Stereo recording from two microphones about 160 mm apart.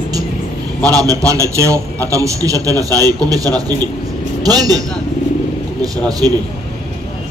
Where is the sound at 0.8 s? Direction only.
20° right (ahead or behind).